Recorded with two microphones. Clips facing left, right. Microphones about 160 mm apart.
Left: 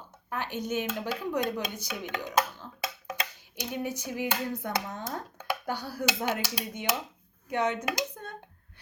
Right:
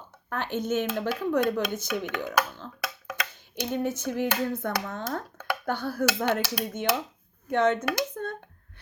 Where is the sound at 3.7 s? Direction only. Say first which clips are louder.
Right 5 dB; 10° left (ahead or behind).